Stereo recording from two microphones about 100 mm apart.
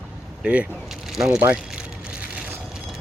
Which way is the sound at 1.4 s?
15° right (ahead or behind).